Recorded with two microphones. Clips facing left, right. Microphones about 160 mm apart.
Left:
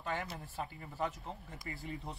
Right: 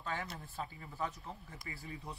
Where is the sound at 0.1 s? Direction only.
20° left (ahead or behind).